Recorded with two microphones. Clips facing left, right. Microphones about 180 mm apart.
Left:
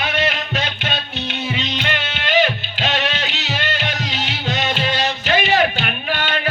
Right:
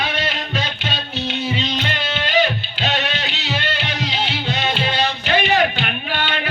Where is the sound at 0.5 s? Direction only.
50° left (ahead or behind).